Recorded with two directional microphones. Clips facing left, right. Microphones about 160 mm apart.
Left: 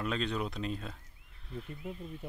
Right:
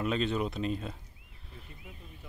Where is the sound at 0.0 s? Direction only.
5° right (ahead or behind).